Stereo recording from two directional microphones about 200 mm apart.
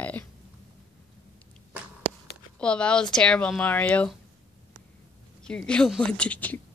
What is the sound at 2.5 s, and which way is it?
Speech, 5° left (ahead or behind).